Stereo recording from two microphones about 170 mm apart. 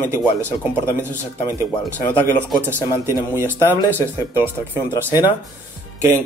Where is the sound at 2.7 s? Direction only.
15° right (ahead or behind).